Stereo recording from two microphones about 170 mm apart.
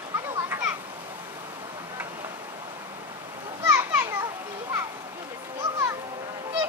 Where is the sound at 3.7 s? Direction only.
15° right (ahead or behind).